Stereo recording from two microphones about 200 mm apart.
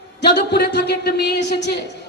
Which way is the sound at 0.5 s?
55° left (ahead or behind).